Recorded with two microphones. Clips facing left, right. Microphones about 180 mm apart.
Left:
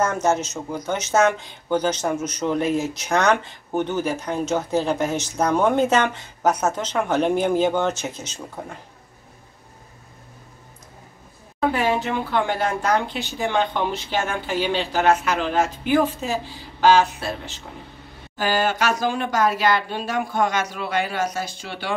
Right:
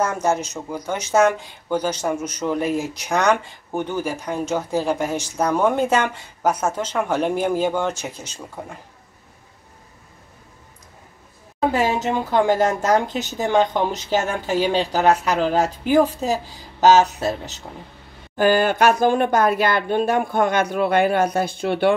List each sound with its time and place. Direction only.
0.0 s speech: 10° right (ahead or behind)
11.7 s speech: 40° right (ahead or behind)
18.3 s speech: 55° right (ahead or behind)